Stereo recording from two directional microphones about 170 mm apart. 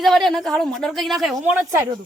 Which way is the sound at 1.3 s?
15° right (ahead or behind).